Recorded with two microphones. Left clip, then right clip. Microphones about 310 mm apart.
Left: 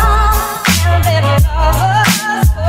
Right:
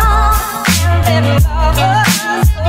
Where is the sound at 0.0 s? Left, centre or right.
Centre.